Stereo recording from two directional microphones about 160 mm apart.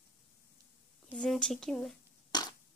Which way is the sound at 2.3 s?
25° left (ahead or behind).